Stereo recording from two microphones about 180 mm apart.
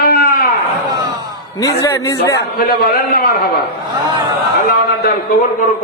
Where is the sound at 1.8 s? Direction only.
15° left (ahead or behind).